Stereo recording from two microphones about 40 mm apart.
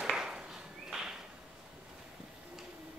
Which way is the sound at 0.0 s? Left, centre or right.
Centre.